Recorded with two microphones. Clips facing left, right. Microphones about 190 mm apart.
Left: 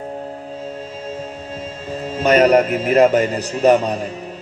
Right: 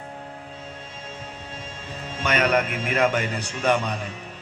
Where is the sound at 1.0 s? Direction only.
35° left (ahead or behind).